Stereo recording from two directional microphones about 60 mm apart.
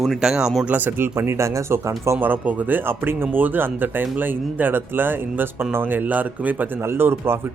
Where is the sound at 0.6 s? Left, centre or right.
Right.